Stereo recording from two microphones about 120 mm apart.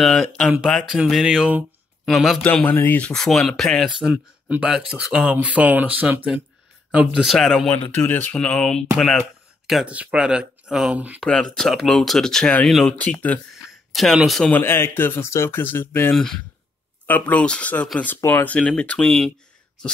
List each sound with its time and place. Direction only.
0.0 s speech: 5° left (ahead or behind)
2.4 s speech: 15° left (ahead or behind); by 7.2 s 10° right (ahead or behind)
7.2 s speech: centre (ahead or behind)
7.7 s speech: 15° left (ahead or behind)
9.7 s speech: 5° right (ahead or behind)
11.2 s speech: 5° left (ahead or behind)
13.9 s speech: centre (ahead or behind)
14.5 s speech: 20° left (ahead or behind)
16.1 s speech: 5° left (ahead or behind)